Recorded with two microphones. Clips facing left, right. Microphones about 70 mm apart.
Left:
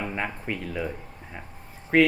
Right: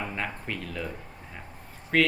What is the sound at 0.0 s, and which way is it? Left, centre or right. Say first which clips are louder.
Speech: left 3 dB; centre.